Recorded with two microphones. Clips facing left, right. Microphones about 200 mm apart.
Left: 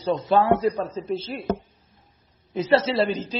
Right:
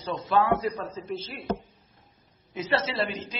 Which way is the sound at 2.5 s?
30° left (ahead or behind).